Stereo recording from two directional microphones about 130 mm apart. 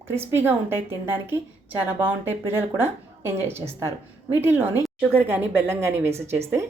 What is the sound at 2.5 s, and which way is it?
A woman's voice, 15° right (ahead or behind).